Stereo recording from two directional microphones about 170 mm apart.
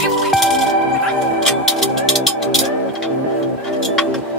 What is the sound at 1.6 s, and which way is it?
Music, centre (ahead or behind).